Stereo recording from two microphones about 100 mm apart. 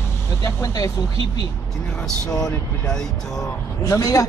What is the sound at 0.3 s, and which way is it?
Speech, 30° left (ahead or behind).